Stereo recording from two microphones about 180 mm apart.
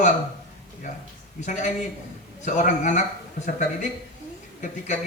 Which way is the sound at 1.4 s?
40° left (ahead or behind).